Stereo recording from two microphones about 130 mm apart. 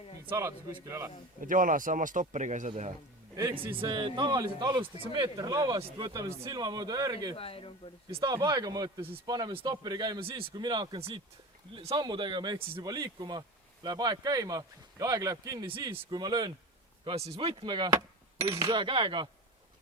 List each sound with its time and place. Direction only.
0.3 s speech: 20° right (ahead or behind)
1.4 s speech: 90° right; by 2.9 s 65° right (ahead or behind)
3.5 s a man's voice: 40° right (ahead or behind)
4.8 s a man's voice: 40° right (ahead or behind)
7.3 s speech: 45° left (ahead or behind)
8.1 s a man's voice: 35° right (ahead or behind)
10.5 s a man's voice: 30° right (ahead or behind); by 11.9 s 50° right (ahead or behind)
11.9 s a man's voice: 35° right (ahead or behind)
15.6 s a man's voice: 40° right (ahead or behind)
17.2 s speech: 50° right (ahead or behind)
17.6 s a man's voice: 35° right (ahead or behind)